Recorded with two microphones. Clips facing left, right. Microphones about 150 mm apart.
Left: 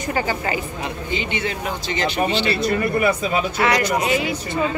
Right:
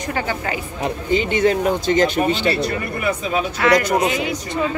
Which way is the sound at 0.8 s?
40° right (ahead or behind).